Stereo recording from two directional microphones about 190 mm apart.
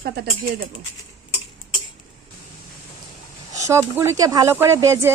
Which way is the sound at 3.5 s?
15° right (ahead or behind).